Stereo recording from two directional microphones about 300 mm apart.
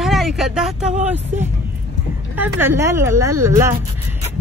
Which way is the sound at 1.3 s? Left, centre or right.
Right.